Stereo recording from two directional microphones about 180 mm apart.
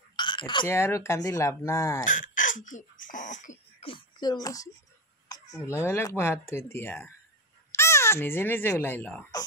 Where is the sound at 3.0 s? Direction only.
45° left (ahead or behind).